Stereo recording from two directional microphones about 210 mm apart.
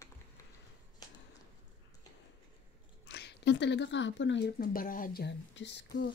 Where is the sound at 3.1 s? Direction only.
55° left (ahead or behind).